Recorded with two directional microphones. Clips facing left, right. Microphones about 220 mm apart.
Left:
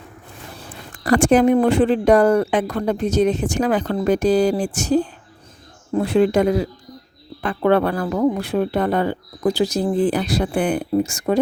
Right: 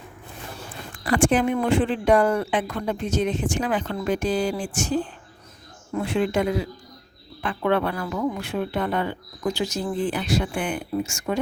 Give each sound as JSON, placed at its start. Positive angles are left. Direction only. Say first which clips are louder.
{"t": 0.9, "sound": "speech", "louder": "left 6 dB", "side_deg": 40}